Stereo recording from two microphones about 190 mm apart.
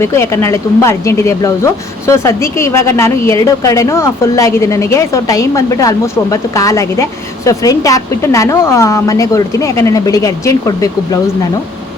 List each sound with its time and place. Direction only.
0.0 s speech: 15° left (ahead or behind)